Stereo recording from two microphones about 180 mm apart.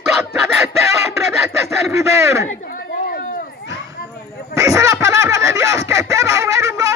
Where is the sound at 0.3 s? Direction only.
15° right (ahead or behind).